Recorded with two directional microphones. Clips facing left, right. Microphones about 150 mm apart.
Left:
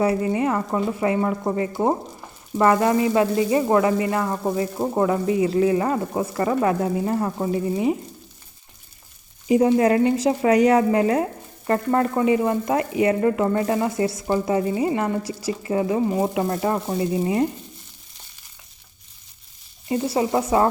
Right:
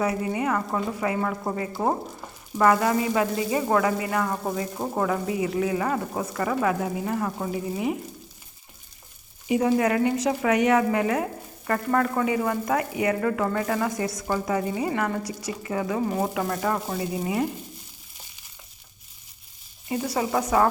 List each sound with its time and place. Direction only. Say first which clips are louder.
0.0 s speech: left 5 dB; 30° left (ahead or behind)
1.7 s speech: left 2 dB; 15° left (ahead or behind)
2.6 s speech: left 3 dB; 25° left (ahead or behind)
7.5 s frying: left 8 dB; 30° left (ahead or behind)
9.5 s speech: left 5 dB; 30° left (ahead or behind)
19.9 s speech: left 4 dB; 25° left (ahead or behind)